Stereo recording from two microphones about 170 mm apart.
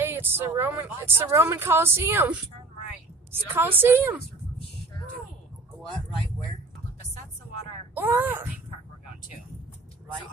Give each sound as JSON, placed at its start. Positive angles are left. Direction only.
{"t": 0.0, "sound": "speech", "side_deg": -10}
{"t": 7.9, "sound": "speech", "side_deg": -10}